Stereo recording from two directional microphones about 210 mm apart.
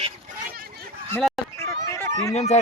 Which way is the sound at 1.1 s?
10° left (ahead or behind).